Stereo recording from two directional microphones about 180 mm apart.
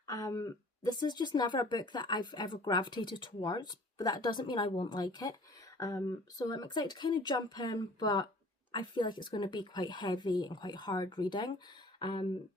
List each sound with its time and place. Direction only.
0.1 s speech: 20° left (ahead or behind)